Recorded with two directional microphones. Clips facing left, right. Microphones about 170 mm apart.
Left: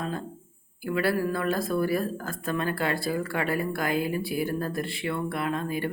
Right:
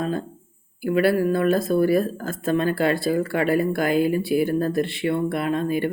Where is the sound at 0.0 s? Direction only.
70° right (ahead or behind).